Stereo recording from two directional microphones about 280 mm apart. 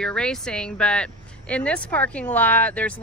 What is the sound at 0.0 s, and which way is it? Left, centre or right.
Speech, centre.